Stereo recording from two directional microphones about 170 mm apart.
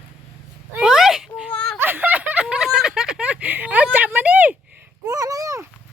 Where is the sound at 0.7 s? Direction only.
5° right (ahead or behind).